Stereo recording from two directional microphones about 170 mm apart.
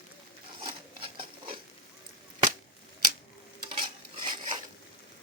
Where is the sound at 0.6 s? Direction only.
30° right (ahead or behind).